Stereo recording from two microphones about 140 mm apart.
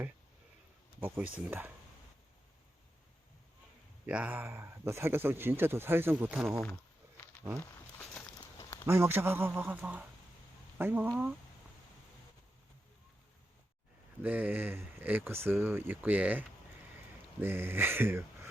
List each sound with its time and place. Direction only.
0.9 s speech: 15° right (ahead or behind)
4.0 s speech: 10° right (ahead or behind)
7.6 s a sound: 15° left (ahead or behind)
8.9 s speech: 20° right (ahead or behind)
14.2 s speech: 10° right (ahead or behind)